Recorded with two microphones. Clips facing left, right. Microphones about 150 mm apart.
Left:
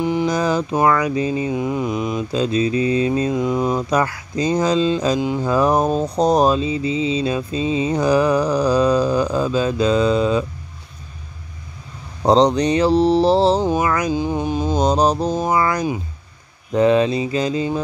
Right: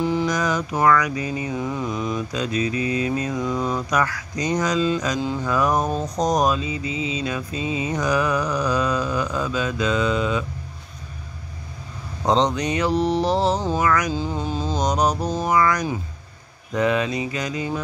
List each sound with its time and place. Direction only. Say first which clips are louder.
0.0 s mantra: left 3 dB; 15° left (ahead or behind)
0.3 s mantra: left 4 dB; 30° left (ahead or behind)
0.7 s speech: left 1 dB; 25° left (ahead or behind)
2.3 s speech: left 8 dB; 30° left (ahead or behind)
5.4 s mantra: left 4 dB; 30° left (ahead or behind)
12.3 s mantra: left 6 dB; 35° left (ahead or behind)
13.6 s a sound: left 5 dB; 15° left (ahead or behind)
13.8 s speech: left 1 dB; 25° left (ahead or behind)
14.1 s a sound: left 5 dB; 15° left (ahead or behind)
14.8 s speech: left 4 dB; 30° left (ahead or behind)